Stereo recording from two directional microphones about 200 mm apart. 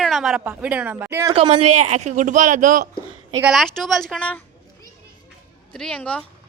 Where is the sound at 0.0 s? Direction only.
Centre (ahead or behind).